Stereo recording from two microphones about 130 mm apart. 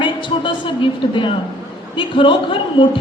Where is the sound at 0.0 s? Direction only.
40° left (ahead or behind).